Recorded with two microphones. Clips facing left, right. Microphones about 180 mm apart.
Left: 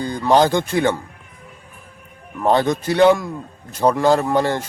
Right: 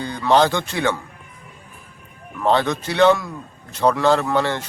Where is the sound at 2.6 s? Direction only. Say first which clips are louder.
Left 4 dB; 45° left (ahead or behind).